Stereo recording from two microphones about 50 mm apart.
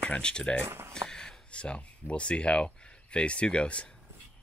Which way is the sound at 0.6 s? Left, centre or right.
Right.